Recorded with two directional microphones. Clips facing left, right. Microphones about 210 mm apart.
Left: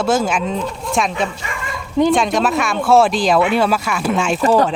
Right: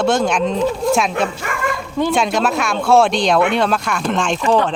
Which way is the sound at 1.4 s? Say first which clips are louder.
Right 6 dB; 55° right (ahead or behind).